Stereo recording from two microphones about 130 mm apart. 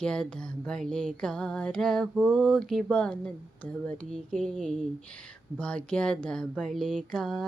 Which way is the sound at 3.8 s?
10° left (ahead or behind).